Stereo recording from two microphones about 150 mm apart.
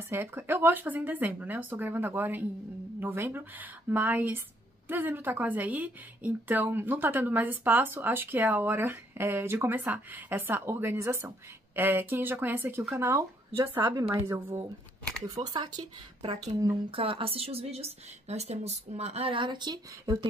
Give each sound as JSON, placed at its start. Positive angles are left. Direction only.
{"t": 0.1, "sound": "a woman's voice", "side_deg": -15}
{"t": 15.4, "sound": "speech", "side_deg": -30}
{"t": 16.9, "sound": "a woman's voice", "side_deg": -35}